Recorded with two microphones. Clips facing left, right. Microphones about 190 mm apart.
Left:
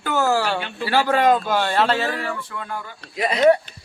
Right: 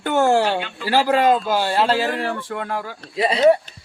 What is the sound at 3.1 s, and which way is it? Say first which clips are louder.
Speech: right 2 dB; 30° right (ahead or behind).